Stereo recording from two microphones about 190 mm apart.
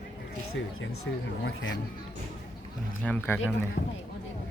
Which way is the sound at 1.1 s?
75° left (ahead or behind).